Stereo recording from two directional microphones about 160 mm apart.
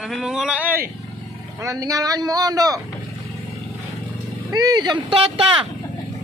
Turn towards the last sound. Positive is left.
turn(degrees=-35)  # may be behind; listen again after turning